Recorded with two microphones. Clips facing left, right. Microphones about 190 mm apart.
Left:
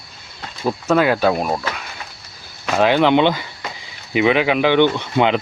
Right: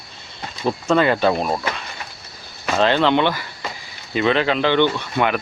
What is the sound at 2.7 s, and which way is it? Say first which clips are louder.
Speech: left 2 dB; 10° left (ahead or behind).